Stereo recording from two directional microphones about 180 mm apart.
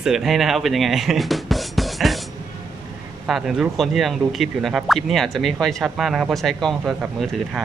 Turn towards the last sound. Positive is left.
turn(degrees=0)  # may be behind; listen again after turning